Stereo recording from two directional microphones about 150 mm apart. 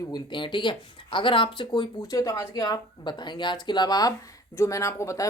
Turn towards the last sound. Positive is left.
turn(degrees=20)  # may be behind; listen again after turning